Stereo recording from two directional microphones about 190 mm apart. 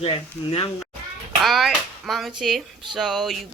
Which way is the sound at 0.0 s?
30° left (ahead or behind).